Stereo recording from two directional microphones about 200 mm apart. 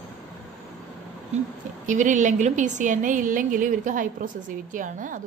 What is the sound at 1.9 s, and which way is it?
A woman's voice, 40° right (ahead or behind).